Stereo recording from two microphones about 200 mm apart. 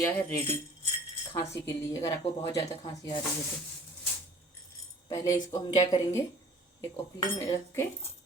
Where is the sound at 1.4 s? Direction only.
15° left (ahead or behind).